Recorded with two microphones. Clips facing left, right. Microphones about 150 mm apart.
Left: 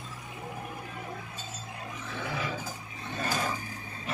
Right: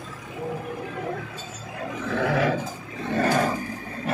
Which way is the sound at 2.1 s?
75° right (ahead or behind).